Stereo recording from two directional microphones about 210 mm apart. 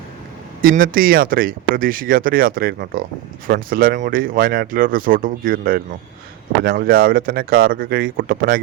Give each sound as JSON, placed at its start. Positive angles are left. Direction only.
{"t": 0.6, "sound": "speech", "side_deg": -40}